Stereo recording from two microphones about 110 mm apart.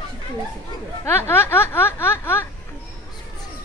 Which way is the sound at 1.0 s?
20° left (ahead or behind).